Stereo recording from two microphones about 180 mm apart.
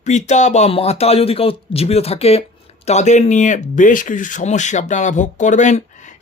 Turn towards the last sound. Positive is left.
turn(degrees=40)  # may be behind; listen again after turning